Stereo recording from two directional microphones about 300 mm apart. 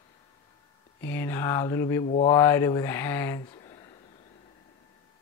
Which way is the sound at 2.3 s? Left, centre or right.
Centre.